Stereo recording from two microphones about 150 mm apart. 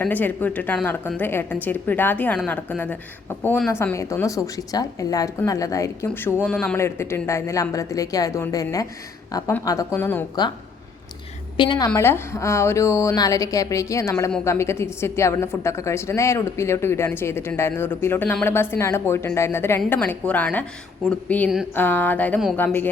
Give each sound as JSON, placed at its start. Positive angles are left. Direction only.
{"t": 0.0, "sound": "a woman's voice", "side_deg": 10}
{"t": 11.5, "sound": "a woman's voice", "side_deg": 30}
{"t": 11.9, "sound": "a woman's voice", "side_deg": 20}